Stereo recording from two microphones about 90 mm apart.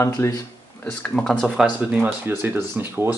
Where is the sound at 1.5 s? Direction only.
10° right (ahead or behind).